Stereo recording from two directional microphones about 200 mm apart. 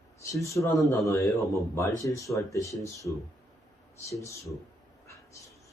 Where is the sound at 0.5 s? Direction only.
15° left (ahead or behind).